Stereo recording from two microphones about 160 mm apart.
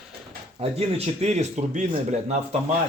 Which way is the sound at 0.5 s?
40° right (ahead or behind).